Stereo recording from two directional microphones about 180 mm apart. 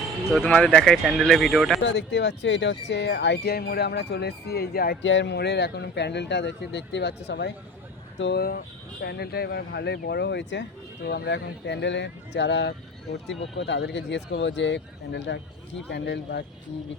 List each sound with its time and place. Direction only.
0.3 s speech: 5° left (ahead or behind)
1.8 s speech: 80° left
15.9 s speech: 70° left (ahead or behind)